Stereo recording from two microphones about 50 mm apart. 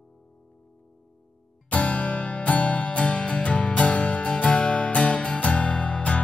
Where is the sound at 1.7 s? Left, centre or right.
Left.